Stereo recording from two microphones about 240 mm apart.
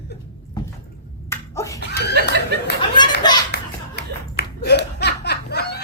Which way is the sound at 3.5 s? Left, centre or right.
Left.